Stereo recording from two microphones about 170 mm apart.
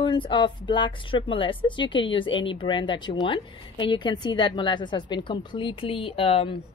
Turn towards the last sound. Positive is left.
turn(degrees=35)  # may be behind; listen again after turning